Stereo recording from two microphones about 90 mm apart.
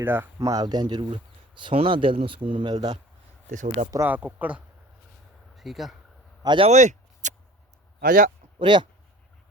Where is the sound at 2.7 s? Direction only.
50° right (ahead or behind).